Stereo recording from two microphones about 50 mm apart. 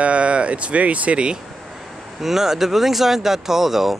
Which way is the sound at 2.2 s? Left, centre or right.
Centre.